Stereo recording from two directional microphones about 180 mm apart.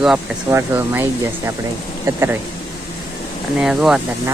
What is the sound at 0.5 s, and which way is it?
Speech, 15° right (ahead or behind).